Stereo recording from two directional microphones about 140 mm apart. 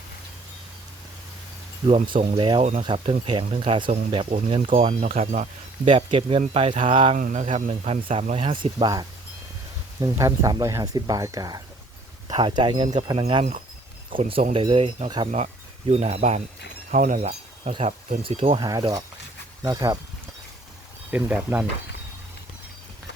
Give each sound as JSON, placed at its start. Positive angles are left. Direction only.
{"t": 1.9, "sound": "speech", "side_deg": -40}
{"t": 5.8, "sound": "speech", "side_deg": -40}
{"t": 7.2, "sound": "speech", "side_deg": -80}
{"t": 7.4, "sound": "speech", "side_deg": -45}
{"t": 10.0, "sound": "speech", "side_deg": -25}
{"t": 16.9, "sound": "speech", "side_deg": -65}
{"t": 17.7, "sound": "speech", "side_deg": -50}
{"t": 18.6, "sound": "speech", "side_deg": -30}
{"t": 21.1, "sound": "speech", "side_deg": -10}